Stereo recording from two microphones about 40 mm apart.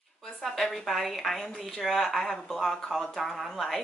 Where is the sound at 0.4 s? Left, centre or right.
Centre.